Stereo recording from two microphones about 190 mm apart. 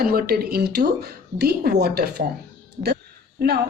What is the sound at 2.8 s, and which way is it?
Speech, 30° right (ahead or behind).